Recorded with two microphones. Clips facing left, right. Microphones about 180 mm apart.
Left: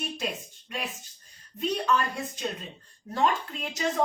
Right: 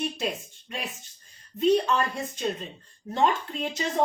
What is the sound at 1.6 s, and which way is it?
Speech, 25° right (ahead or behind).